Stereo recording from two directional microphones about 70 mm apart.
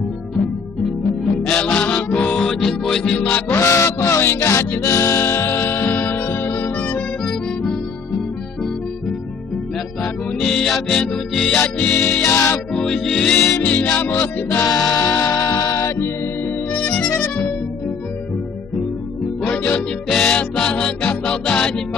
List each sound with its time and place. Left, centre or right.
1.4 s music: centre
2.3 s music: centre
3.2 s music: left
3.5 s music: left
10.4 s music: centre; by 12.4 s left
12.7 s music: centre
13.6 s music: left
14.6 s music: left
16.7 s music: left
17.1 s music: left
19.4 s music: centre